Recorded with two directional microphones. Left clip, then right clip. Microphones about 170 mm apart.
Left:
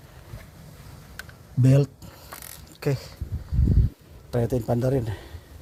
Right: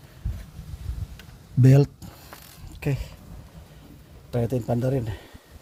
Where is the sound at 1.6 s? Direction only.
35° right (ahead or behind).